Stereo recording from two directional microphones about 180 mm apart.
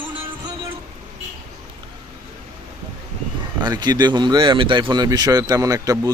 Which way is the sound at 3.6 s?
25° right (ahead or behind).